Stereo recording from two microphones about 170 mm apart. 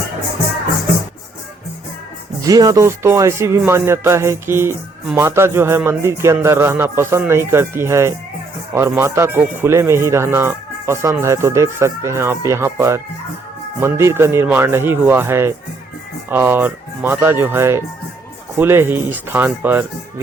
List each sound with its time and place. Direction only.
2.4 s speech: 20° right (ahead or behind)